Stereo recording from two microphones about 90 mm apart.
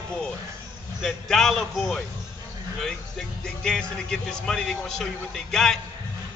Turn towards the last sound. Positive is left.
turn(degrees=5)  # may be behind; listen again after turning